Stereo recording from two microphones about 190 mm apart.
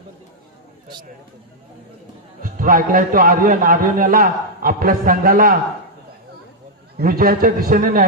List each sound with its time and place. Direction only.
2.4 s a man's voice: 45° right (ahead or behind)
7.0 s a man's voice: 50° right (ahead or behind)